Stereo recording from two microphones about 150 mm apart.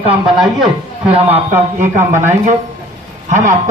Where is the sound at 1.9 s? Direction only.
55° right (ahead or behind).